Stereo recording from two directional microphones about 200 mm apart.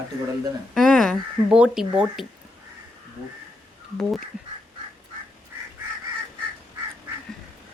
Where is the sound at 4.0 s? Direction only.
Centre (ahead or behind).